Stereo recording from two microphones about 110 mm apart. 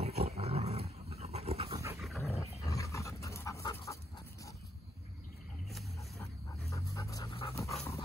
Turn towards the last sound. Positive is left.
turn(degrees=30)  # may be behind; listen again after turning